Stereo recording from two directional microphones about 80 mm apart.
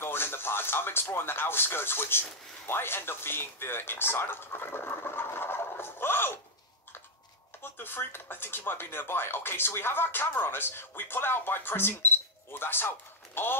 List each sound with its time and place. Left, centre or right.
0.0 s speech: left
7.6 s speech: left